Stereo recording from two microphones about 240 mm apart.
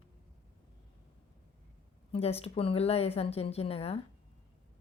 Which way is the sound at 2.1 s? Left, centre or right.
Left.